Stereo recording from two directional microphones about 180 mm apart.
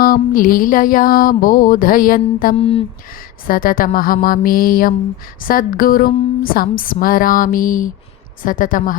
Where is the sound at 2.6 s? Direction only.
30° left (ahead or behind).